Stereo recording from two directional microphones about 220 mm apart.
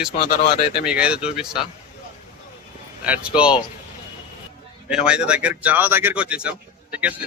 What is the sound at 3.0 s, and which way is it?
Speech, 5° right (ahead or behind).